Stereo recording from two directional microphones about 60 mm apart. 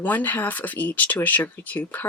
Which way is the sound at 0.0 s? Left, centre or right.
Left.